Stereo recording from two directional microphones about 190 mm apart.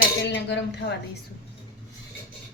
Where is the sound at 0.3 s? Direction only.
70° left (ahead or behind).